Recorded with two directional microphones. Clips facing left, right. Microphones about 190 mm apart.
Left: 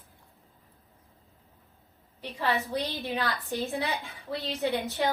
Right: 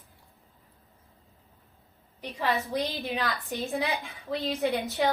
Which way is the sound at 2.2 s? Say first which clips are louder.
Even; 15° right (ahead or behind).